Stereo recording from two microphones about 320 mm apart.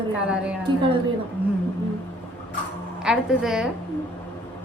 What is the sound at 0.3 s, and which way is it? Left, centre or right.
Speech, centre.